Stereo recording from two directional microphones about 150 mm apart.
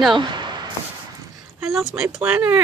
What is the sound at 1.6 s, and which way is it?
Speech, centre (ahead or behind).